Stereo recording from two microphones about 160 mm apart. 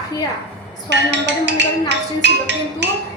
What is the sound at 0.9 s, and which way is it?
Music, 90° right.